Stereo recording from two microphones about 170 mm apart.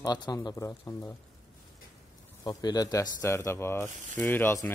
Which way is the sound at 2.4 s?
25° left (ahead or behind).